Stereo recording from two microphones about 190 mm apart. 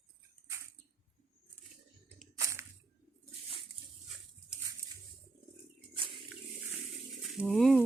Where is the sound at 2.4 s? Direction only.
15° right (ahead or behind).